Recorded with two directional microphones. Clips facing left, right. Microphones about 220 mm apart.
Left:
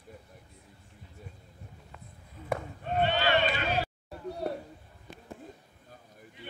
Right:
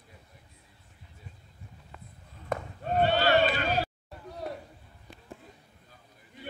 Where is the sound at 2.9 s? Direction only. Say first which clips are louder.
Right 3 dB; 40° right (ahead or behind).